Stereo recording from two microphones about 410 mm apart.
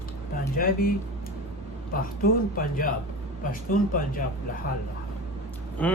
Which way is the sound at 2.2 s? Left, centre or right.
Left.